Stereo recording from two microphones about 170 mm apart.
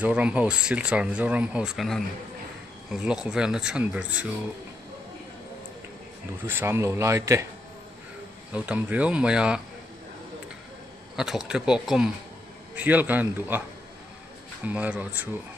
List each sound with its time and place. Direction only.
0.0 s speech: 5° right (ahead or behind)
6.4 s speech: 15° right (ahead or behind)
8.5 s speech: 10° right (ahead or behind)
11.1 s speech: 5° right (ahead or behind)
14.7 s speech: 10° right (ahead or behind)